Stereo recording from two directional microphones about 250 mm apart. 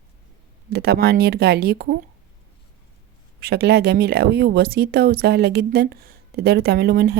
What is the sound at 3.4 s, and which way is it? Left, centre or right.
Speech, right.